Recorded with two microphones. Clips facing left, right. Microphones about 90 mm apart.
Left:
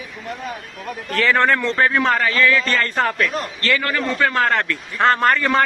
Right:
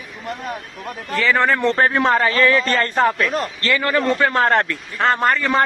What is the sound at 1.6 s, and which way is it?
A man's voice, 30° right (ahead or behind).